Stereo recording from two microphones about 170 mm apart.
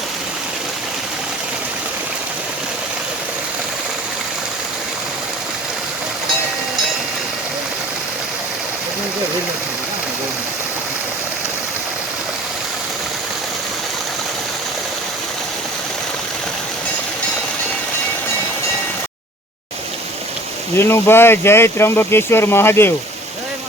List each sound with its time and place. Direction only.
20.7 s speech: 15° left (ahead or behind)